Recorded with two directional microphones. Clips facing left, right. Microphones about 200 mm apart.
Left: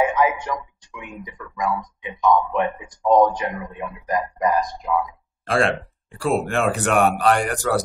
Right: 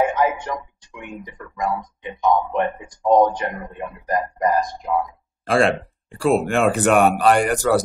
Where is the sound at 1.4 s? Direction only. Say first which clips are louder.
Even; 40° right (ahead or behind).